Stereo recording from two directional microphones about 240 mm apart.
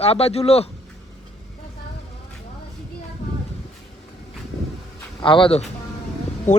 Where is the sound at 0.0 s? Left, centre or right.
Left.